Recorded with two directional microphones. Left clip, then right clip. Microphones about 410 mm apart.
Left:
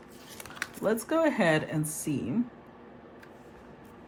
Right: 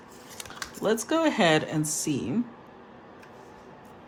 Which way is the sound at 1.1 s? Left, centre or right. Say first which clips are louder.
Right 3 dB; centre.